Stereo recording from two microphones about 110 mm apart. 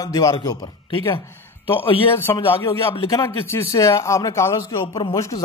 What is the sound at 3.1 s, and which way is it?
Speech, 30° left (ahead or behind).